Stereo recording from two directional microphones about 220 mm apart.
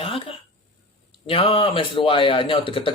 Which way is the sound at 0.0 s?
25° left (ahead or behind).